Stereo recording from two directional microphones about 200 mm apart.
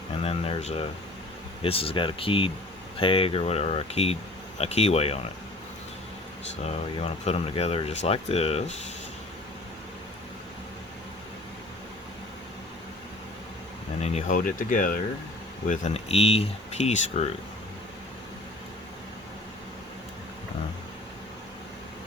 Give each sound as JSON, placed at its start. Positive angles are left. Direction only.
{"t": 0.2, "sound": "speech", "side_deg": 30}
{"t": 7.0, "sound": "speech", "side_deg": 30}
{"t": 14.0, "sound": "speech", "side_deg": 35}